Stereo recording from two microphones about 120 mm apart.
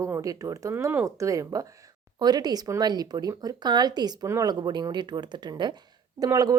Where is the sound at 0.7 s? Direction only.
15° right (ahead or behind).